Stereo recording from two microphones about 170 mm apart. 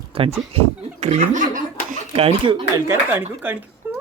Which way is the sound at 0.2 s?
35° right (ahead or behind).